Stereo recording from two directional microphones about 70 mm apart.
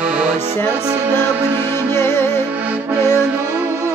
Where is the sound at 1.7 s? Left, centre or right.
Left.